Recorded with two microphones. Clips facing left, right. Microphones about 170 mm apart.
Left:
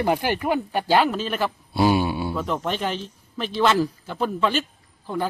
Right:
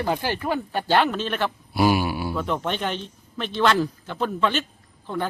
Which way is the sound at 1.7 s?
25° left (ahead or behind).